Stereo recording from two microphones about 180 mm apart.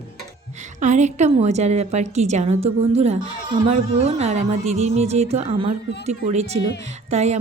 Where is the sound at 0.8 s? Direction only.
40° right (ahead or behind).